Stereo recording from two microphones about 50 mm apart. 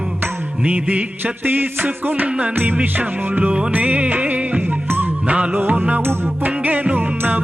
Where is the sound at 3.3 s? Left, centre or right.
Right.